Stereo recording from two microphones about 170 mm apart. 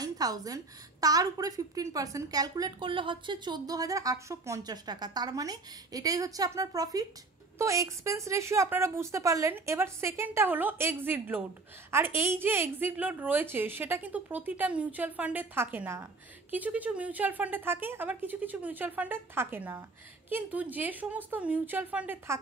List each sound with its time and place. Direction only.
0.0 s a woman's voice: 20° right (ahead or behind)